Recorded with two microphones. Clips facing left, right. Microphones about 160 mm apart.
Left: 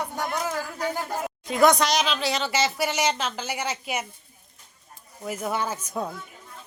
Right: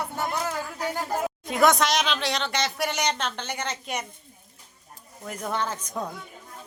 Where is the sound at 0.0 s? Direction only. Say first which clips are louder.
Even; 15° left (ahead or behind).